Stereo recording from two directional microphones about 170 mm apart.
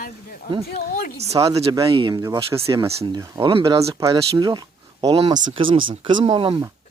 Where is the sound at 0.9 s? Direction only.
60° left (ahead or behind).